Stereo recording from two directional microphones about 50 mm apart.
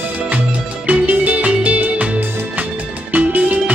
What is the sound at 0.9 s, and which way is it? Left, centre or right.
Music, right.